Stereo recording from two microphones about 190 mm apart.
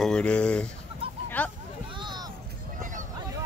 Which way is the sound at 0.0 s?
5° left (ahead or behind).